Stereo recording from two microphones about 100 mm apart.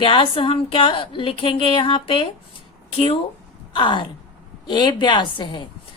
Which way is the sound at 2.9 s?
75° left (ahead or behind).